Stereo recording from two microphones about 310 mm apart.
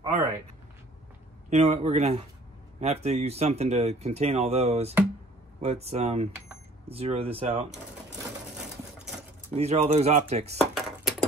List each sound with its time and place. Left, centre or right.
0.0 s a sound: centre
1.5 s speech: centre
9.5 s speech: right
10.6 s cutlery: centre